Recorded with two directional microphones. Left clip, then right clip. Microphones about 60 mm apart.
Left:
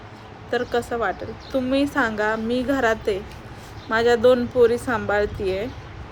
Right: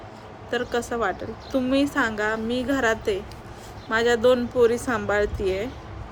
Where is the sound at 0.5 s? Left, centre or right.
Right.